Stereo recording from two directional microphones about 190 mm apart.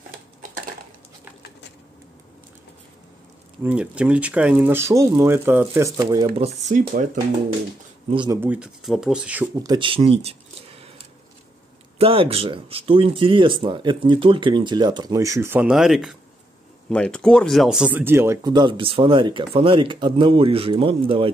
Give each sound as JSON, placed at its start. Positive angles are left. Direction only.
{"t": 3.6, "sound": "speech", "side_deg": -5}
{"t": 8.3, "sound": "speech", "side_deg": -10}
{"t": 9.6, "sound": "speech", "side_deg": -25}
{"t": 12.0, "sound": "speech", "side_deg": -30}